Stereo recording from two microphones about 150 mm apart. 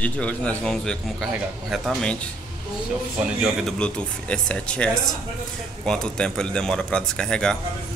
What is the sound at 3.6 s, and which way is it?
Speech, 5° left (ahead or behind).